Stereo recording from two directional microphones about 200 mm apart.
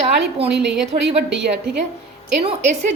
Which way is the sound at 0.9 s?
25° right (ahead or behind).